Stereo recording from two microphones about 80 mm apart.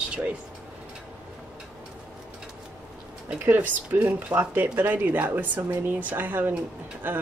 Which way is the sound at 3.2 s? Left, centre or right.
Right.